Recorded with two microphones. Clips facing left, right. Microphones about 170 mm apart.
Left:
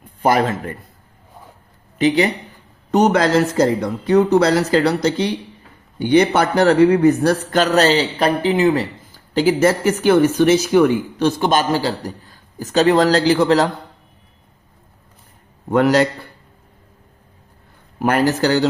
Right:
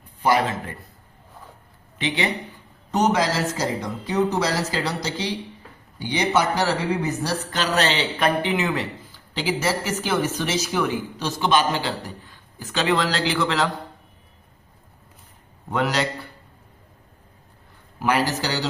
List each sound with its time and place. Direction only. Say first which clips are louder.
0.2 s a man's voice: left 4 dB; 50° left (ahead or behind)
2.0 s speech: left 10 dB; 40° left (ahead or behind)
2.9 s a man's voice: left 7 dB; 60° left (ahead or behind); by 13.7 s 40° left (ahead or behind)
15.7 s a man's voice: left 9 dB; 50° left (ahead or behind)
18.0 s a man's voice: left 6 dB; 50° left (ahead or behind)